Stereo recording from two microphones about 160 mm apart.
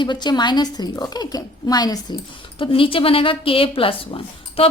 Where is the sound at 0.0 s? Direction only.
30° left (ahead or behind).